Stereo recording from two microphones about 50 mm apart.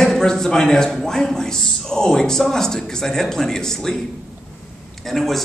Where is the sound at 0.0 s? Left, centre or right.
Centre.